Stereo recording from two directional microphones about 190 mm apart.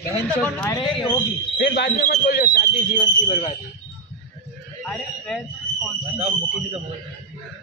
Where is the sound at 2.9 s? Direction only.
35° left (ahead or behind).